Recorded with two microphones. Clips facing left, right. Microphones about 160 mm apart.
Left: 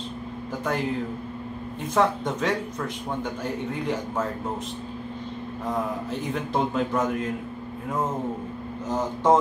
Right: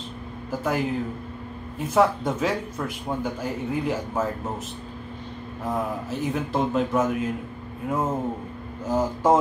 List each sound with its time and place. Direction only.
0.5 s a man's voice: 5° right (ahead or behind)
2.0 s speech: 5° right (ahead or behind)
6.0 s a man's voice: 5° right (ahead or behind)
8.8 s speech: 10° right (ahead or behind)